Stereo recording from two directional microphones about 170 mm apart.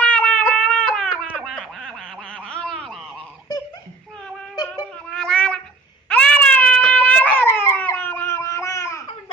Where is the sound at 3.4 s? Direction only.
20° left (ahead or behind).